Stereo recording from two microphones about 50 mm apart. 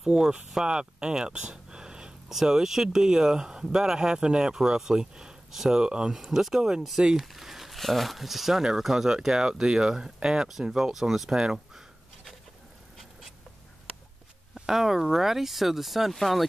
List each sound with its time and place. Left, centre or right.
0.0 s speech: centre
14.5 s speech: centre